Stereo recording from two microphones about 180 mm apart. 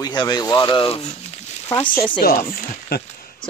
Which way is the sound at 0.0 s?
25° left (ahead or behind).